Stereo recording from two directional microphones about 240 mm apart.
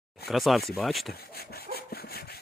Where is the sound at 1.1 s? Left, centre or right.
Left.